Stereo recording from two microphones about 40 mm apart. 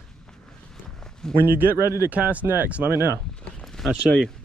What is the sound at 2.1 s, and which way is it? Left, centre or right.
Speech, right.